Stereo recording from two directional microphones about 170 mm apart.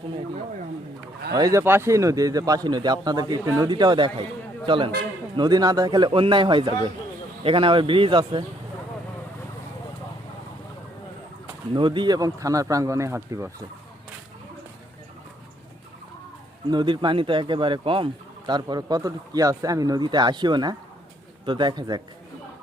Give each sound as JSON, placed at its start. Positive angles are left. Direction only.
{"t": 1.4, "sound": "speech", "side_deg": -20}
{"t": 11.7, "sound": "speech", "side_deg": -30}
{"t": 16.6, "sound": "speech", "side_deg": -25}